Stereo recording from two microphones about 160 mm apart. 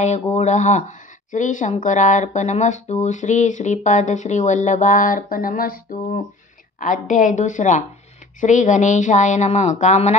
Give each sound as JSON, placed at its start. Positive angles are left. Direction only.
{"t": 0.0, "sound": "speech", "side_deg": 45}